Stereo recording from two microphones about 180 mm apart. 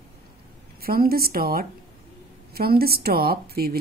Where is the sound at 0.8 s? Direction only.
55° right (ahead or behind).